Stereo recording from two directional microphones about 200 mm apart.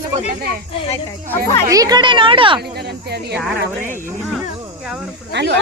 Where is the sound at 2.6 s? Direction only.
55° right (ahead or behind).